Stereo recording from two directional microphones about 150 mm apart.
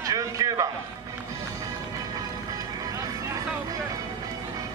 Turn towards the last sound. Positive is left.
turn(degrees=-25)  # may be behind; listen again after turning